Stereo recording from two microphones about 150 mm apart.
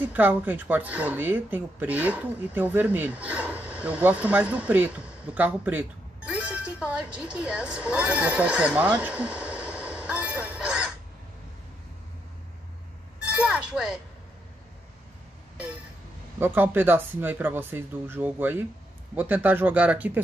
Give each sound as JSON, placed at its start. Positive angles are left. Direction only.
{"t": 0.0, "sound": "speech", "side_deg": -10}
{"t": 13.2, "sound": "a sound", "side_deg": -5}
{"t": 16.3, "sound": "speech", "side_deg": -15}